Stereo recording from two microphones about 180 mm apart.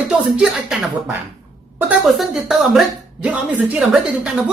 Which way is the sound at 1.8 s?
Centre (ahead or behind).